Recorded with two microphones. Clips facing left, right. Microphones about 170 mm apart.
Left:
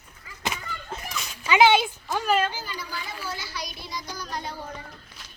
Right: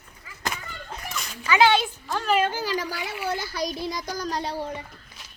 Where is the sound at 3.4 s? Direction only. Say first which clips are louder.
Right 8 dB; 50° right (ahead or behind).